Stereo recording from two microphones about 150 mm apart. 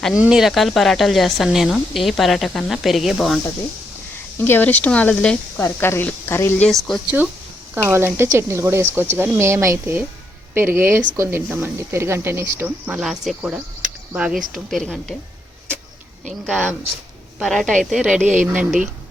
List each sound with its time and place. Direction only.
0.0 s speech: 5° right (ahead or behind)
4.4 s speech: 15° left (ahead or behind)
6.7 s speech: centre (ahead or behind)
7.9 s speech: 15° right (ahead or behind); by 15.1 s 5° left (ahead or behind)
16.5 s speech: centre (ahead or behind)